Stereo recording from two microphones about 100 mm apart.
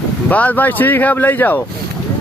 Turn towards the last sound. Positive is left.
turn(degrees=20)  # may be behind; listen again after turning